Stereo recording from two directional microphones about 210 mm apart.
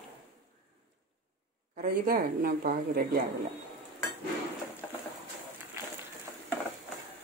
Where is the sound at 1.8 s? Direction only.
45° right (ahead or behind).